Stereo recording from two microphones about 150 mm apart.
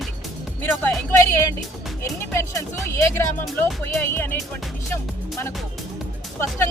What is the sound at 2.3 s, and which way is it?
Speech, 20° left (ahead or behind).